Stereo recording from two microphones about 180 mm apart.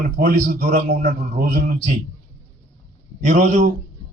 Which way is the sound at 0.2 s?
60° right (ahead or behind).